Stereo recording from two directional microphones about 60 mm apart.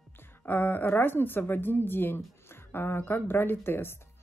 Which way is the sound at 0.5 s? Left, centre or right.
Left.